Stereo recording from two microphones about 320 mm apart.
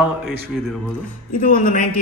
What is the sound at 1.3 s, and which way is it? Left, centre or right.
Speech, left.